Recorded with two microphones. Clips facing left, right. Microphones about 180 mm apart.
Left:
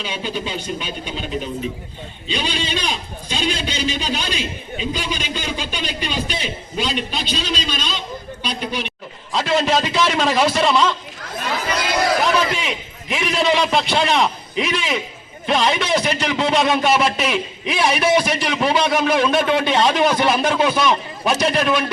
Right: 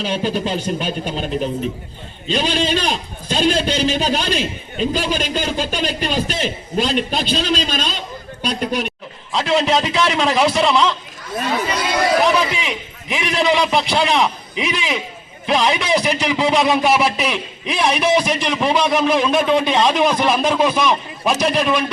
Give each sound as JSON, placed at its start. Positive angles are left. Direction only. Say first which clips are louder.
{"t": 0.0, "sound": "a man's voice", "louder": "right 6 dB", "side_deg": -40}
{"t": 9.3, "sound": "a man's voice", "louder": "right 1 dB", "side_deg": 0}
{"t": 12.2, "sound": "a man's voice", "louder": "right 2 dB", "side_deg": 0}